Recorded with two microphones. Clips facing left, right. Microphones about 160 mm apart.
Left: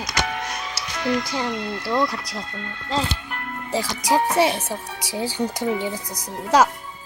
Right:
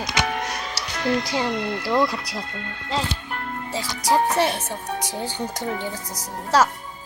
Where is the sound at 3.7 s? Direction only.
10° left (ahead or behind).